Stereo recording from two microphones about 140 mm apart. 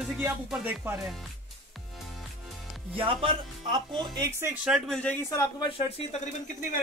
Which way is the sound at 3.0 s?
40° right (ahead or behind).